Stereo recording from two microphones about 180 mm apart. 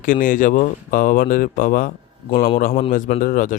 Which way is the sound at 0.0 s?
50° left (ahead or behind).